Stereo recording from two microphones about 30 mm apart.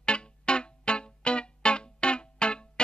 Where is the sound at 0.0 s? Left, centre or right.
Left.